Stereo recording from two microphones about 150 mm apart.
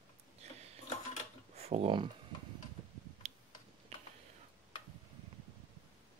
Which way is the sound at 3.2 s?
45° right (ahead or behind).